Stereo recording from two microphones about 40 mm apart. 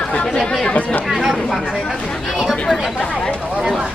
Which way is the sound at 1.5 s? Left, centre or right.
Centre.